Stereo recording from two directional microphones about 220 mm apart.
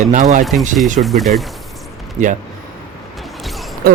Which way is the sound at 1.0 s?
Centre (ahead or behind).